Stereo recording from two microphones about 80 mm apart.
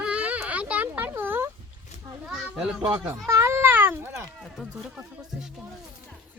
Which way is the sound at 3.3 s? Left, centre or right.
Right.